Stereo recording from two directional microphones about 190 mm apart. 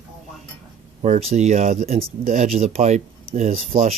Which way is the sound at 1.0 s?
35° right (ahead or behind).